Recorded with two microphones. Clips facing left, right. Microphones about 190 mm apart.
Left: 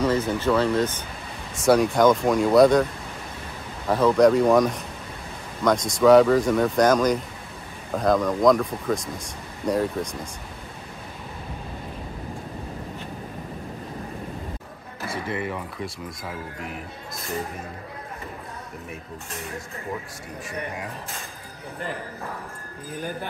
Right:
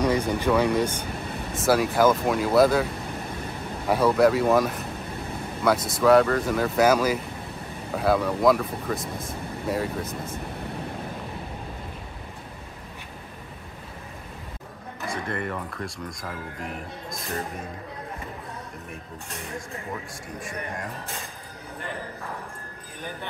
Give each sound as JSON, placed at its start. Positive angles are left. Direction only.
{"t": 0.0, "sound": "speech", "side_deg": -15}
{"t": 3.9, "sound": "speech", "side_deg": -5}
{"t": 15.0, "sound": "speech", "side_deg": 5}